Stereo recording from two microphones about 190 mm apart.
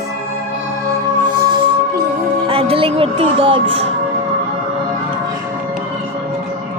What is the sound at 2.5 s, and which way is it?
Speech, 30° right (ahead or behind).